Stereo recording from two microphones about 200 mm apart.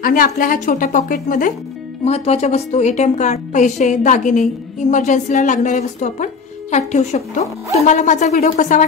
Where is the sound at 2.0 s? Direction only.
30° left (ahead or behind).